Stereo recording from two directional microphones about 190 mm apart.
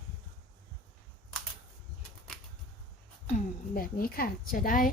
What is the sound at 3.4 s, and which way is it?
A woman's voice, 50° left (ahead or behind).